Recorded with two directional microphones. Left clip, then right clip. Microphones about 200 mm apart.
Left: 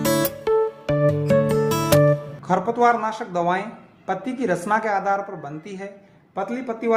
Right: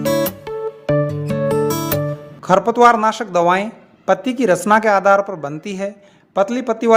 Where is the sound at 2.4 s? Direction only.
45° right (ahead or behind).